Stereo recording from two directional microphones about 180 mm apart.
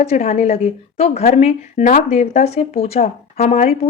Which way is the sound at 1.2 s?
35° left (ahead or behind).